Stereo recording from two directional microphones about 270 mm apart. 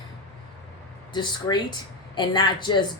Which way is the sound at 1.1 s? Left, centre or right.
Centre.